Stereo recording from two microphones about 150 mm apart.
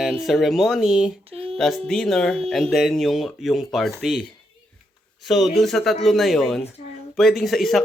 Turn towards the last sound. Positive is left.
turn(degrees=0)  # may be behind; listen again after turning